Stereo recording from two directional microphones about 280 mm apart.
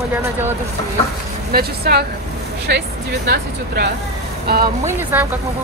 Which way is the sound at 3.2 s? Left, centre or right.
Right.